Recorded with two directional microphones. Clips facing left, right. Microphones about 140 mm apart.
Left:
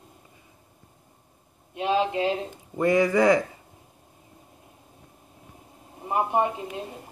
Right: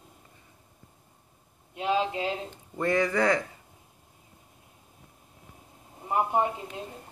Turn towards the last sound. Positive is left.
turn(degrees=10)  # may be behind; listen again after turning